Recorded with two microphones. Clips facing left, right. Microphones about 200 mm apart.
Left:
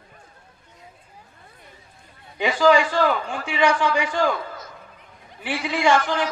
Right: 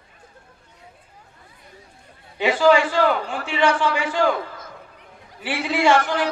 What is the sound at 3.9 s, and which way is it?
A man's voice, 55° right (ahead or behind).